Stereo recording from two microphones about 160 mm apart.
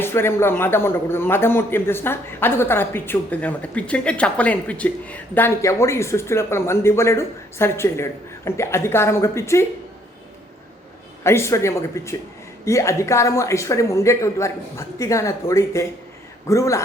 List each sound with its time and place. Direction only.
0.0 s a man's voice: 15° left (ahead or behind)
11.2 s a man's voice: 15° left (ahead or behind)